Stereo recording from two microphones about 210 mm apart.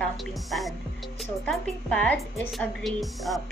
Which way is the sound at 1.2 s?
Centre (ahead or behind).